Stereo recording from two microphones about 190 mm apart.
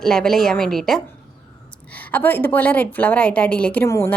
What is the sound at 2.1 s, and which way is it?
A woman's voice, 10° left (ahead or behind).